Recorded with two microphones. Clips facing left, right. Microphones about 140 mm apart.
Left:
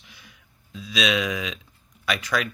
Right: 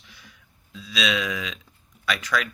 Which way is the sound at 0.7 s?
15° left (ahead or behind).